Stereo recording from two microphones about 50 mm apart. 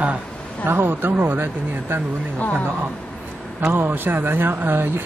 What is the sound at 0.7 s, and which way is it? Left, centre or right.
Speech, right.